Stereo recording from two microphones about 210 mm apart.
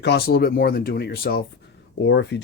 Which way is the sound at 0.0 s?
50° left (ahead or behind).